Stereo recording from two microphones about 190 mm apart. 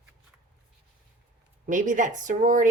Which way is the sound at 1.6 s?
40° right (ahead or behind).